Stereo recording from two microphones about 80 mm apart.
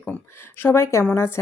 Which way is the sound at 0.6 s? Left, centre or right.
Left.